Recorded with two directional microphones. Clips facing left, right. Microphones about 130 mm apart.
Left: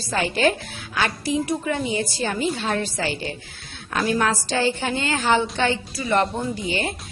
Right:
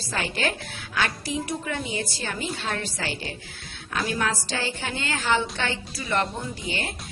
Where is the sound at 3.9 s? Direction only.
50° left (ahead or behind).